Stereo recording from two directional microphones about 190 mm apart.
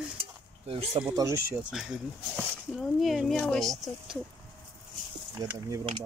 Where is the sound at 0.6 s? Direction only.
30° right (ahead or behind).